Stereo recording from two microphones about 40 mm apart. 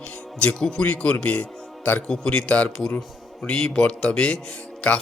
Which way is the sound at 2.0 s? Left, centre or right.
Centre.